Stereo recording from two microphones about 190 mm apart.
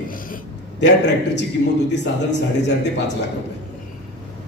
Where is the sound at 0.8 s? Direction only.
65° left (ahead or behind).